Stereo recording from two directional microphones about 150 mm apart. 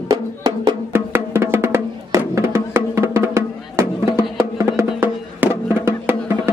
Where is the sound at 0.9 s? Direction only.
15° right (ahead or behind).